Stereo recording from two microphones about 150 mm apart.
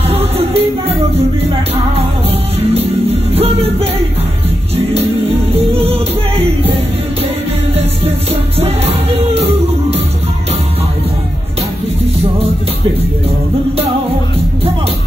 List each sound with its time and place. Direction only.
0.1 s music: 40° right (ahead or behind)
2.6 s music: 40° right (ahead or behind)
5.5 s music: 40° right (ahead or behind)